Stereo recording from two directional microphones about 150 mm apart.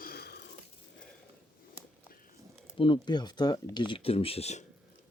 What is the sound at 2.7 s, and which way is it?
Speech, 35° left (ahead or behind).